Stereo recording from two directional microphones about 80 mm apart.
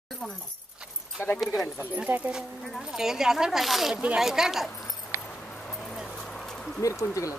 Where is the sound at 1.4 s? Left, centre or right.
Centre.